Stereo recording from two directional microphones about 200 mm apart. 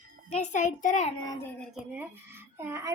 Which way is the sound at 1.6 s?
5° right (ahead or behind).